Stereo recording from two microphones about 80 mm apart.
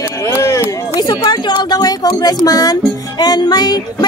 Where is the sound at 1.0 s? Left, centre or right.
Left.